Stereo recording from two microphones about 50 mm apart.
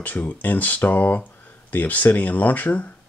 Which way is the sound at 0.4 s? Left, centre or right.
Left.